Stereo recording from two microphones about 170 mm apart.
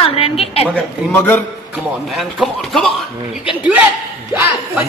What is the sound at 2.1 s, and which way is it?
Speech, centre (ahead or behind).